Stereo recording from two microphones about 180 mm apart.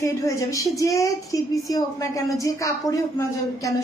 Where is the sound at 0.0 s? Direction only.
15° left (ahead or behind).